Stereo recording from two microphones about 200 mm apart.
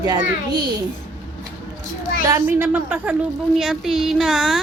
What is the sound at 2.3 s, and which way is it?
A woman's voice, 15° right (ahead or behind).